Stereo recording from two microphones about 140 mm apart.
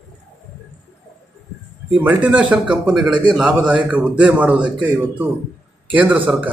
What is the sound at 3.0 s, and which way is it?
Speech, 35° right (ahead or behind).